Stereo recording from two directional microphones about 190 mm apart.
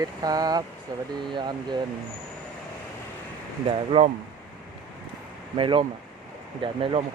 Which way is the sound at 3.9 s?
25° right (ahead or behind).